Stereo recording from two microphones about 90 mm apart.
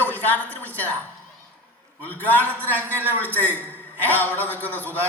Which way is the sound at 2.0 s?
20° left (ahead or behind).